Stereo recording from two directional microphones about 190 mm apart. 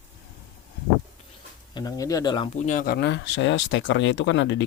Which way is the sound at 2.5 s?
40° left (ahead or behind).